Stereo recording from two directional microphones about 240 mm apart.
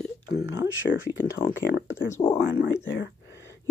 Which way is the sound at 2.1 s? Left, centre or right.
Left.